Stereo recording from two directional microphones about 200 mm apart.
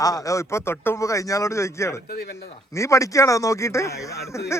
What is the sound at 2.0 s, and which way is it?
Speech, 55° left (ahead or behind).